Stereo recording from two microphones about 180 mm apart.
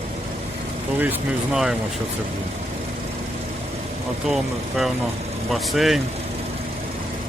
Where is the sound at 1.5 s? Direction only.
5° right (ahead or behind).